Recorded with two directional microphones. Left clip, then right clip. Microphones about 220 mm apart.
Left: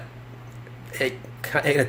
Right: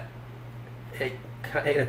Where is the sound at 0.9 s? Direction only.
50° left (ahead or behind).